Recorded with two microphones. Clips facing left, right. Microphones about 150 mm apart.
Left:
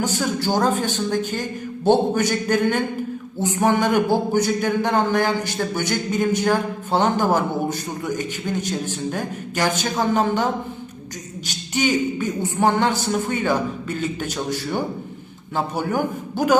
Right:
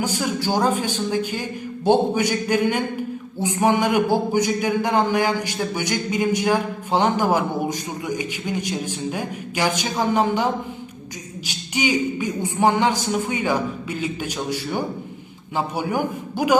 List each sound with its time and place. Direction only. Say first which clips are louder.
0.0 s a man's voice: left 1 dB; 10° right (ahead or behind)